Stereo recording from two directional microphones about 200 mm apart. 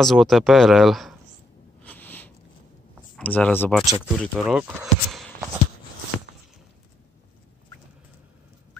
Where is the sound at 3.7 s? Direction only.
Centre (ahead or behind).